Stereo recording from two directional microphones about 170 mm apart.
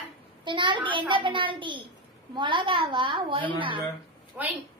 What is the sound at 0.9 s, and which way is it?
A child's voice, 30° right (ahead or behind).